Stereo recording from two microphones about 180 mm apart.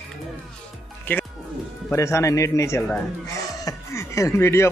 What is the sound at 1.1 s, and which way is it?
Speech, 10° left (ahead or behind).